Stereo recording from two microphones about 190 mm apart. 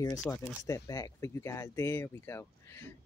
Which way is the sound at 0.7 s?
20° left (ahead or behind).